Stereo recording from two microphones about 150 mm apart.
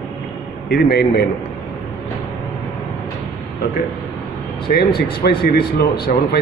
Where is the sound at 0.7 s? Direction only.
90° left.